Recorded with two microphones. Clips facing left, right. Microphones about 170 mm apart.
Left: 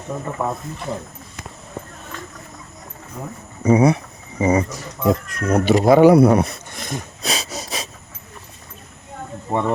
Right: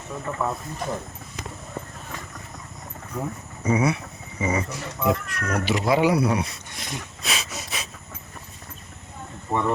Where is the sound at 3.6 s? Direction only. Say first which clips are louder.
Left 7 dB; 35° left (ahead or behind).